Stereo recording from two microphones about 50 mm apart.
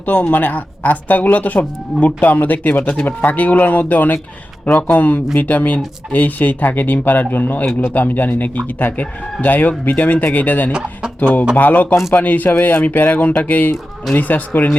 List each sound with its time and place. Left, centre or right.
0.0 s speech: left
10.7 s speech: centre
11.2 s speech: left